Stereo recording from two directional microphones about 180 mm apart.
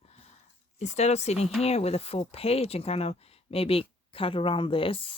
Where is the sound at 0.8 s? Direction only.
40° left (ahead or behind).